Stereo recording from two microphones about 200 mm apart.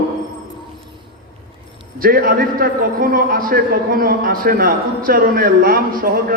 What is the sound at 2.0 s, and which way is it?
A man's voice, 45° right (ahead or behind).